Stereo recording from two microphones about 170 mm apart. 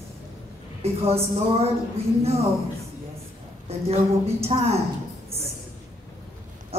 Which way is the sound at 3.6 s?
35° right (ahead or behind).